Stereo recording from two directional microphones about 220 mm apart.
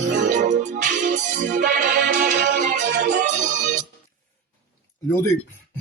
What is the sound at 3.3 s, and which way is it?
Music, 35° right (ahead or behind).